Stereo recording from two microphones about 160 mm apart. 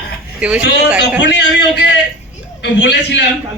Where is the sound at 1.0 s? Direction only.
90° left.